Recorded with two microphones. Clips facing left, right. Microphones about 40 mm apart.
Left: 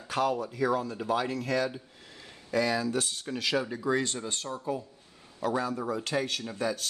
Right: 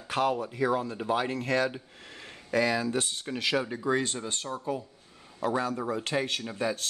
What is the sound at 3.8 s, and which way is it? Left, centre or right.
Speech, centre.